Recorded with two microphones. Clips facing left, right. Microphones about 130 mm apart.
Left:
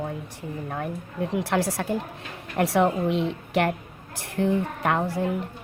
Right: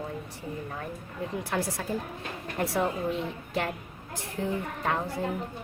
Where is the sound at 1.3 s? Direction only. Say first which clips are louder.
Left 6 dB; 80° left.